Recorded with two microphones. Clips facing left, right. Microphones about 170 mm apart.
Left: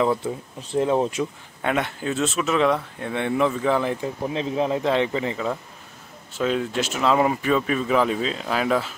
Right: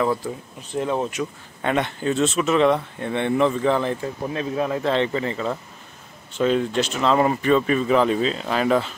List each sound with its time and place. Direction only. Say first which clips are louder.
0.7 s speech: left 3 dB; 25° left (ahead or behind)
1.6 s speech: right 2 dB; 5° left (ahead or behind)
6.3 s speech: right 3 dB; 5° left (ahead or behind)